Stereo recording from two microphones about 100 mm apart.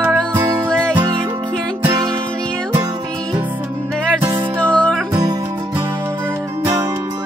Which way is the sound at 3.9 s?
10° left (ahead or behind).